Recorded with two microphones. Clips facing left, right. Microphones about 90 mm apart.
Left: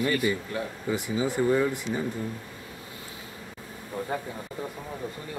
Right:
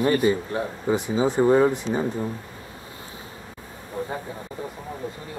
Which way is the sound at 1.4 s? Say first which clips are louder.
Right 7 dB; 35° right (ahead or behind).